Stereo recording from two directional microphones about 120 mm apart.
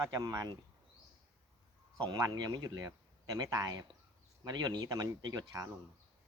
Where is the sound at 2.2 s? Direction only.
30° right (ahead or behind).